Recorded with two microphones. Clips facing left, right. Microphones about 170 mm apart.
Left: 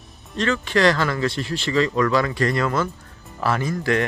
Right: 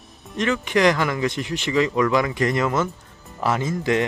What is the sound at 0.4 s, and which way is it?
Speech, 15° right (ahead or behind).